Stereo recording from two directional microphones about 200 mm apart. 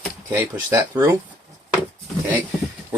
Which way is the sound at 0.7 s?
15° right (ahead or behind).